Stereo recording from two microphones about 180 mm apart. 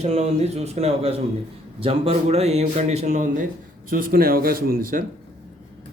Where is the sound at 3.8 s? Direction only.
50° right (ahead or behind).